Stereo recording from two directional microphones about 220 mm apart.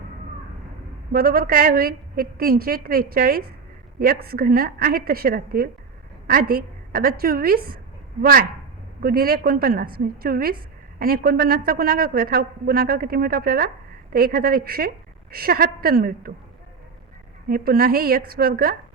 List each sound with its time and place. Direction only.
1.1 s a woman's voice: 40° right (ahead or behind)
17.5 s a woman's voice: 40° right (ahead or behind)